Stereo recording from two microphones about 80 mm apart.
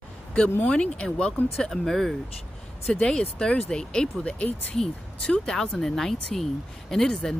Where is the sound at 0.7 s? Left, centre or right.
Centre.